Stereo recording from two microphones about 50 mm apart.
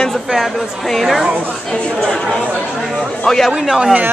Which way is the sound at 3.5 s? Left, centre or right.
Centre.